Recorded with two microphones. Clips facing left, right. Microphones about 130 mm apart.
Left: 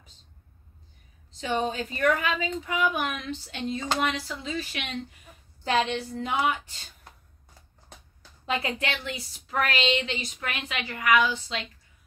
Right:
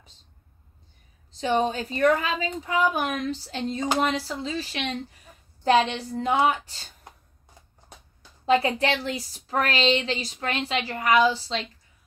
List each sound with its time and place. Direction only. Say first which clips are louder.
1.4 s a woman's voice: right 4 dB; 35° right (ahead or behind)
8.5 s a woman's voice: right 8 dB; 35° right (ahead or behind)